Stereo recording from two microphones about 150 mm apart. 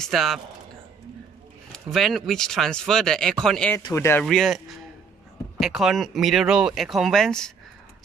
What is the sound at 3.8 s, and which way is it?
Speech, 20° left (ahead or behind).